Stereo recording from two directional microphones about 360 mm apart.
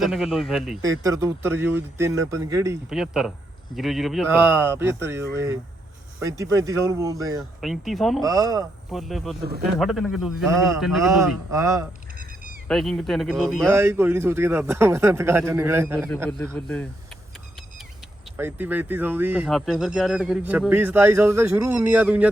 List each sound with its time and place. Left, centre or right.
0.0 s a man's voice: centre
9.4 s speech: right
9.7 s a man's voice: centre
18.3 s speech: centre